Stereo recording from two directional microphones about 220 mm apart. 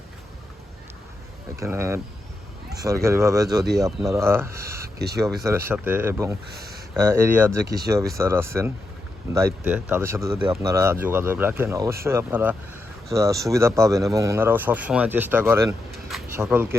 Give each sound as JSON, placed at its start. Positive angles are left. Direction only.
{"t": 1.5, "sound": "speech", "side_deg": -10}
{"t": 4.9, "sound": "speech", "side_deg": -45}
{"t": 5.5, "sound": "speech", "side_deg": -10}
{"t": 6.5, "sound": "a sound", "side_deg": -45}
{"t": 7.0, "sound": "speech", "side_deg": -10}